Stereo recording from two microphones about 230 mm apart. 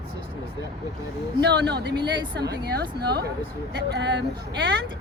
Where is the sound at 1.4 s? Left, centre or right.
Right.